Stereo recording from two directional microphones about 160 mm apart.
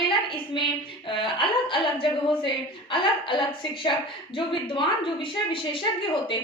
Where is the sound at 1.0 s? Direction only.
30° left (ahead or behind).